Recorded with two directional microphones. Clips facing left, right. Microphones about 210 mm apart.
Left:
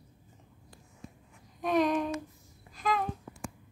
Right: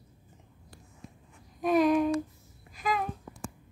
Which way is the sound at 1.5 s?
5° right (ahead or behind).